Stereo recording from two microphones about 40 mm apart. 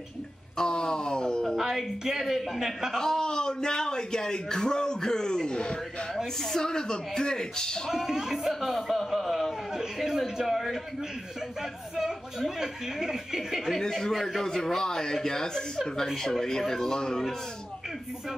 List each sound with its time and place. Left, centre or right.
0.6 s speech: centre
1.6 s speech: centre
2.9 s a man's voice: centre
6.4 s a man's voice: centre
7.9 s speech: centre
9.1 s a sound: centre
9.8 s a man's voice: centre
12.0 s speech: centre
13.7 s a man's voice: centre
14.1 s speech: centre
14.4 s a man's voice: centre